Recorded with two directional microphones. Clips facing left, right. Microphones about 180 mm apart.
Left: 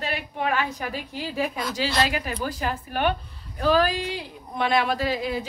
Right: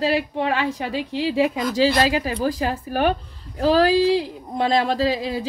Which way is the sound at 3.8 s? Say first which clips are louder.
Right 10 dB; 90° right.